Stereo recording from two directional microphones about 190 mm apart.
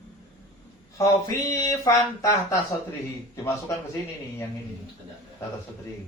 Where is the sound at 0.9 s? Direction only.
15° left (ahead or behind).